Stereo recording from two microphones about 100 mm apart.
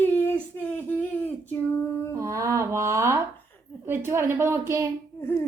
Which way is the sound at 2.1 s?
30° right (ahead or behind).